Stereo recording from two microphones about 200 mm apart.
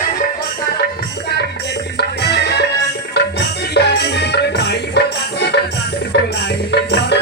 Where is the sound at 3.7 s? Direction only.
55° left (ahead or behind).